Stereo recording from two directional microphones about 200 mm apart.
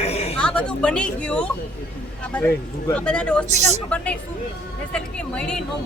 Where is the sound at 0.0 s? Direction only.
30° left (ahead or behind).